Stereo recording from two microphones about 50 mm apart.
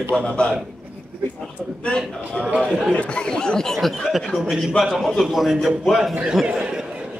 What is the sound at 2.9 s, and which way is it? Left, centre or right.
A woman's voice, left.